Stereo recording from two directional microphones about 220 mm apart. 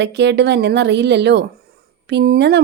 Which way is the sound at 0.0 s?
50° right (ahead or behind).